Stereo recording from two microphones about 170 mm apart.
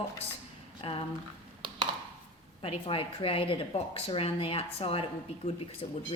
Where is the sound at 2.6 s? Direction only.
35° left (ahead or behind).